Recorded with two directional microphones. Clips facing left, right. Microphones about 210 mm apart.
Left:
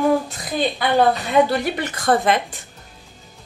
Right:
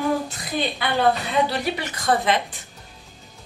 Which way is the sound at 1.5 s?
50° left (ahead or behind).